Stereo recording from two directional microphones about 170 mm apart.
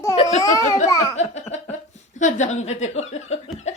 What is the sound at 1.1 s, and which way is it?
Speech, 40° left (ahead or behind).